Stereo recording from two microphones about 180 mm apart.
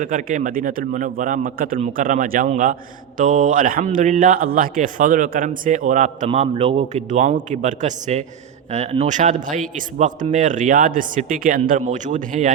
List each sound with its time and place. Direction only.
0.0 s a man's voice: 45° right (ahead or behind)